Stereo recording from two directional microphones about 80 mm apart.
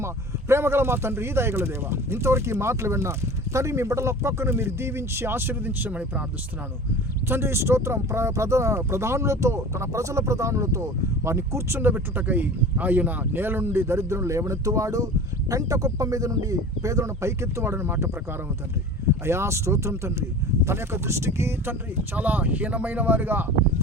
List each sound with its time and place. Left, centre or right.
0.0 s speech: right; by 6.2 s centre
7.3 s speech: right
19.2 s speech: right
22.1 s speech: right